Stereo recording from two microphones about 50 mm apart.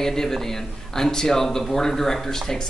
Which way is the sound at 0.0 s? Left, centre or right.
Centre.